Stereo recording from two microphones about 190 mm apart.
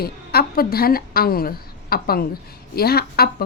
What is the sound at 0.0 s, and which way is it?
A woman's voice, 55° left (ahead or behind).